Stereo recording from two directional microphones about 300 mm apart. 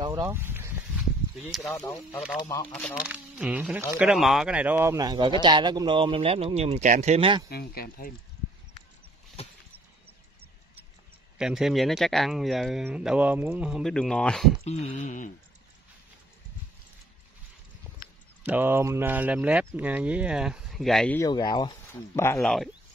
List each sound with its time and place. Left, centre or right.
0.0 s speech: centre
7.4 s speech: left
11.3 s speech: centre
14.6 s a sound: left
18.4 s speech: centre